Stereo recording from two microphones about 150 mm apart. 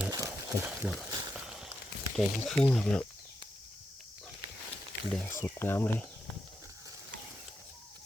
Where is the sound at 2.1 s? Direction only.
5° left (ahead or behind).